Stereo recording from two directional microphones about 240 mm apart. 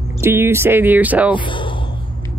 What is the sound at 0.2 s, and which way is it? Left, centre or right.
Speech, centre.